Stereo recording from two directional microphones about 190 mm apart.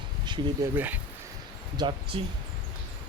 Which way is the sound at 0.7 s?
10° right (ahead or behind).